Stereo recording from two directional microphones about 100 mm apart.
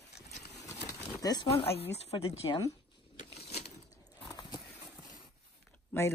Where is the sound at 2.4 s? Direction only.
45° left (ahead or behind).